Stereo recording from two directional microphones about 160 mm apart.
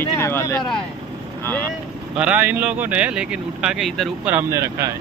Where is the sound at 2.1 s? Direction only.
10° right (ahead or behind).